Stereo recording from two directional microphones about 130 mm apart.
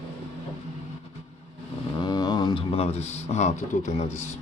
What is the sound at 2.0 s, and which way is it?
Speech, 30° left (ahead or behind).